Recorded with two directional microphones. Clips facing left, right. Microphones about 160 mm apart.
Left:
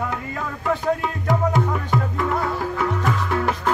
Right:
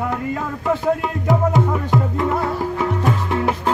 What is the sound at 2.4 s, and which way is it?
Music, 25° right (ahead or behind).